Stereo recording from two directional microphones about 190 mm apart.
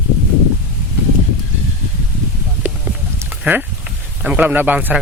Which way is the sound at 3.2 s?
10° right (ahead or behind).